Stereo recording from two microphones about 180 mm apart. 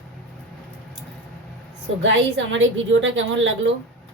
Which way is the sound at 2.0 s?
90° right.